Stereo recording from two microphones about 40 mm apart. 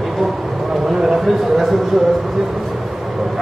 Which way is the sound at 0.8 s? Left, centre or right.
Centre.